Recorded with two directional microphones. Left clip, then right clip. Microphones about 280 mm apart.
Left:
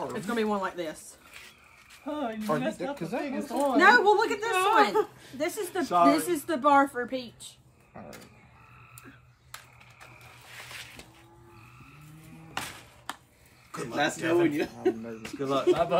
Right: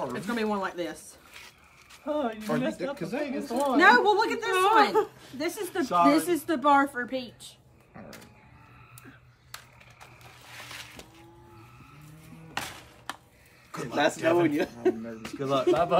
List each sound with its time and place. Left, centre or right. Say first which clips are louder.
0.0 s a woman's voice: even; centre
2.0 s a woman's voice: right 1 dB; centre
3.3 s a woman's voice: even; centre
10.8 s music: even; centre
12.5 s music: right 1 dB; centre
13.7 s a sound: even; centre
14.4 s speech: right 1 dB; right
15.2 s a woman's voice: right 1 dB; centre
15.7 s speech: right 1 dB; centre